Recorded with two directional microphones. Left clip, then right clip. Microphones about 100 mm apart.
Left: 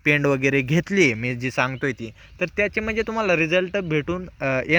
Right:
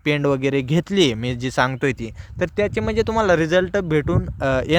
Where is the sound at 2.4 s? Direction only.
45° right (ahead or behind).